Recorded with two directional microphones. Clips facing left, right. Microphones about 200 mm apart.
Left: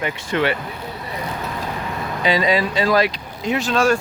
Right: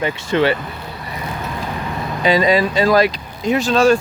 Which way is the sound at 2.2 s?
45° right (ahead or behind).